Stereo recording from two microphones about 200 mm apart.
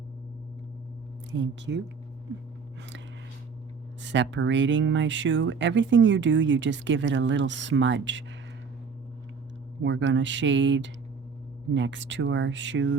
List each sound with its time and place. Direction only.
1.3 s speech: 65° right (ahead or behind)
4.0 s speech: 65° right (ahead or behind)
9.8 s speech: 65° right (ahead or behind)